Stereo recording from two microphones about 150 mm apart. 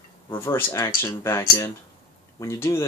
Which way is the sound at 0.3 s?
15° left (ahead or behind).